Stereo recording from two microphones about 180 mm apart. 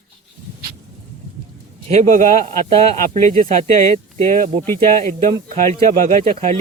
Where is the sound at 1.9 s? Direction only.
40° right (ahead or behind).